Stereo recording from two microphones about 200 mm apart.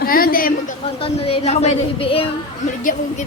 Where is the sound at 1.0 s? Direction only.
30° left (ahead or behind).